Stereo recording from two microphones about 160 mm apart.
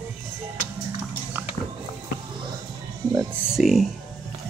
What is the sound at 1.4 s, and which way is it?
Music, 15° right (ahead or behind).